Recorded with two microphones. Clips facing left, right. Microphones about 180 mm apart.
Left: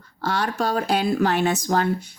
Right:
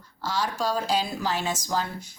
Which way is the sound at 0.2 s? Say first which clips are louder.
Left 4 dB; 60° left (ahead or behind).